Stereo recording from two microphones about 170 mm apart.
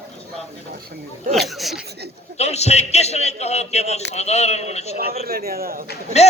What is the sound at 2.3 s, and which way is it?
A man's voice, 40° left (ahead or behind).